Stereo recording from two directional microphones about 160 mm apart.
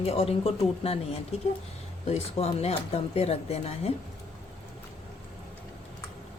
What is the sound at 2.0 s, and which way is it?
Speech, 40° left (ahead or behind).